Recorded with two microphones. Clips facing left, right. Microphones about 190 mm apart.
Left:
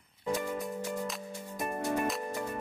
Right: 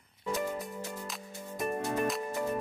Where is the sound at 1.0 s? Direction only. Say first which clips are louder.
Left 4 dB; centre (ahead or behind).